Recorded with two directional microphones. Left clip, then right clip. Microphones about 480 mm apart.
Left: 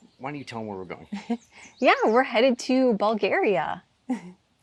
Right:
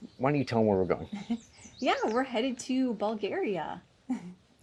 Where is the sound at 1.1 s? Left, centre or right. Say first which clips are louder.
Left 5 dB; left.